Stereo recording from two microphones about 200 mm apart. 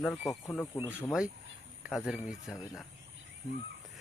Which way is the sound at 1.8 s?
5° right (ahead or behind).